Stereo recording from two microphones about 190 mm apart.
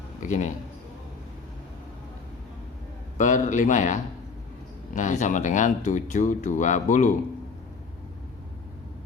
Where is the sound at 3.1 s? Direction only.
40° left (ahead or behind).